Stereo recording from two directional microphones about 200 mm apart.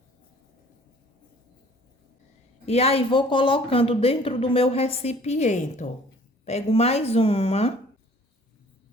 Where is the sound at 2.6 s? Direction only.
30° left (ahead or behind).